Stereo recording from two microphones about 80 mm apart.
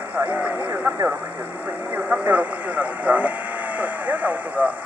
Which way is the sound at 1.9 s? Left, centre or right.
Right.